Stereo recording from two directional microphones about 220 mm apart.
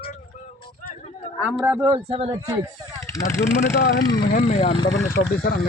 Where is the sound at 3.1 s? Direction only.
15° left (ahead or behind).